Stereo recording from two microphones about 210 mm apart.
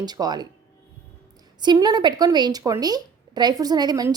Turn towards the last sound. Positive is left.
turn(degrees=-20)  # may be behind; listen again after turning